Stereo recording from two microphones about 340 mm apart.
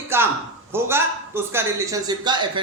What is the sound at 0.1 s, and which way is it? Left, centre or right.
A man's voice, centre.